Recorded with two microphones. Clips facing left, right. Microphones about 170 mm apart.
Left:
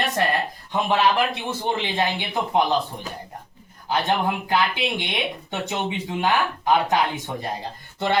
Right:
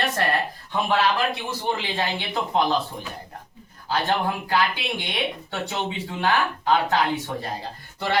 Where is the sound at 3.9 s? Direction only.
20° left (ahead or behind).